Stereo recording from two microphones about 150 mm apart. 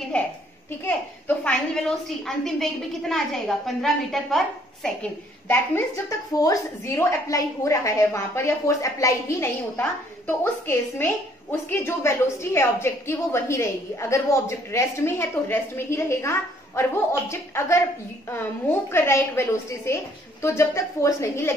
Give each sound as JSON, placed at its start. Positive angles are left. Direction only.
{"t": 0.1, "sound": "a woman's voice", "side_deg": 10}
{"t": 5.5, "sound": "a woman's voice", "side_deg": 20}